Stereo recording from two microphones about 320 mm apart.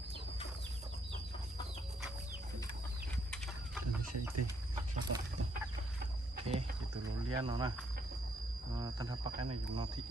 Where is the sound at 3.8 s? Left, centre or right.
Right.